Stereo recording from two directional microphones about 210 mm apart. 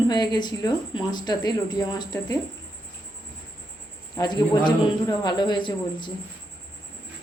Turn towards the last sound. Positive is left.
turn(degrees=20)  # may be behind; listen again after turning